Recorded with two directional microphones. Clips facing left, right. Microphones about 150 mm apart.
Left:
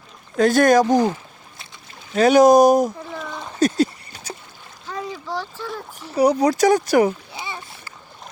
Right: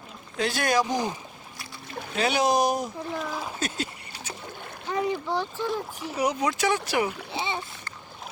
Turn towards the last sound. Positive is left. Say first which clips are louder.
# right 3 dB
turn(degrees=-25)  # may be behind; listen again after turning